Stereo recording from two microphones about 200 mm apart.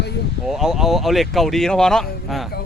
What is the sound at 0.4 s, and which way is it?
Speech, centre (ahead or behind).